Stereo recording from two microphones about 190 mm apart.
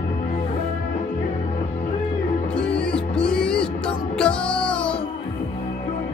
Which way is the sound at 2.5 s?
5° left (ahead or behind).